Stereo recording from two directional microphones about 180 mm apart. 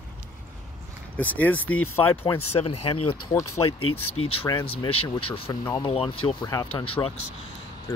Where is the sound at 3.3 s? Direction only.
15° left (ahead or behind).